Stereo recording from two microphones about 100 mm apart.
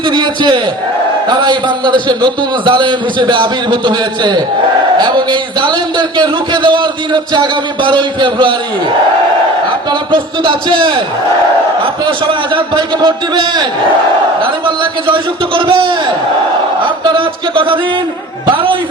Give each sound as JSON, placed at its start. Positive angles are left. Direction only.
{"t": 0.1, "sound": "a man's voice", "side_deg": -50}
{"t": 10.1, "sound": "a man's voice", "side_deg": -55}
{"t": 12.0, "sound": "a man's voice", "side_deg": -55}
{"t": 15.0, "sound": "a man's voice", "side_deg": -60}
{"t": 17.0, "sound": "a man's voice", "side_deg": -60}